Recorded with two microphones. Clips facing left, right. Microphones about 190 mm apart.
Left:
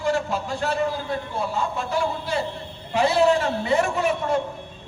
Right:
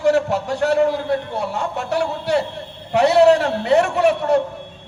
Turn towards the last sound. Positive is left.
turn(degrees=-70)  # may be behind; listen again after turning